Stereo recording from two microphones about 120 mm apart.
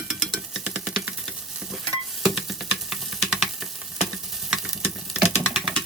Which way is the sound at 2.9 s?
5° right (ahead or behind).